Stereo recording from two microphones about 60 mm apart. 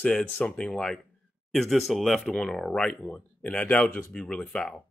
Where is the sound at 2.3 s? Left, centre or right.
Centre.